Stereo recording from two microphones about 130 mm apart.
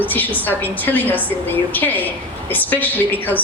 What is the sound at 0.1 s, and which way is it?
A woman's voice, 15° left (ahead or behind).